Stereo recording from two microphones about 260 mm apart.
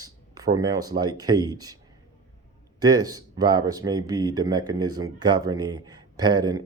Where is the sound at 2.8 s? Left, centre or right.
Centre.